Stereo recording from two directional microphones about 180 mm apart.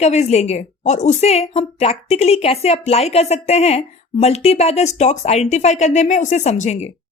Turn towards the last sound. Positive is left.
turn(degrees=40)  # may be behind; listen again after turning